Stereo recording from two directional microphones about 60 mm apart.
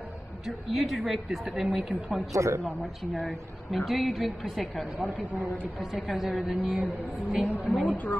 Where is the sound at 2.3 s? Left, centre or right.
Right.